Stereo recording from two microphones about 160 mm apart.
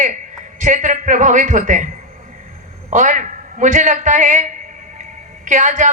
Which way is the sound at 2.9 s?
50° right (ahead or behind).